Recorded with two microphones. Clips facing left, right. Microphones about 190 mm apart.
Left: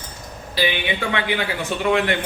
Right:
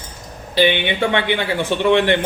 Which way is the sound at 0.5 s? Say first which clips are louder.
Right 6 dB; 25° right (ahead or behind).